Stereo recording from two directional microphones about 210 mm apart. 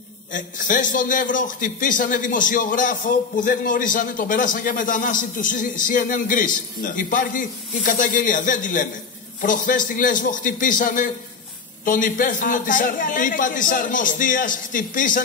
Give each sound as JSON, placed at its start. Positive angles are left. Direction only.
{"t": 0.3, "sound": "a man's voice", "side_deg": 40}